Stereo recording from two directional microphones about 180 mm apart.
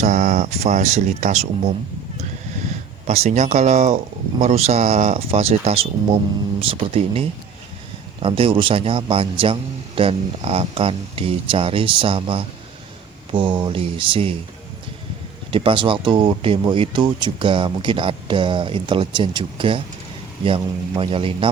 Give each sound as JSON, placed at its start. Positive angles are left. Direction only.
{"t": 0.0, "sound": "a sound", "side_deg": -45}
{"t": 3.1, "sound": "speech", "side_deg": -40}
{"t": 15.5, "sound": "speech", "side_deg": -30}